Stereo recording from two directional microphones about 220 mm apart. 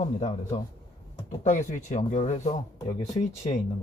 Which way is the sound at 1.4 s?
35° left (ahead or behind).